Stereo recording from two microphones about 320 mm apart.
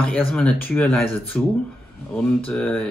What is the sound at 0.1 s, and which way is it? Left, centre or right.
Speech, centre.